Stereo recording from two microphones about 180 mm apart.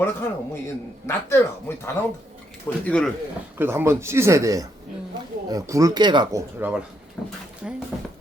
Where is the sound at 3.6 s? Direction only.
15° right (ahead or behind).